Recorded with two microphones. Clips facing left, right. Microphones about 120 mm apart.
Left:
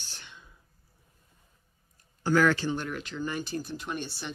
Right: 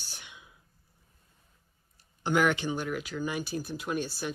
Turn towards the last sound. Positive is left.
turn(degrees=-5)  # may be behind; listen again after turning